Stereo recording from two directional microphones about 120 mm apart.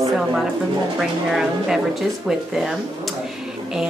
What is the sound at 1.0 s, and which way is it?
Speech, 5° right (ahead or behind).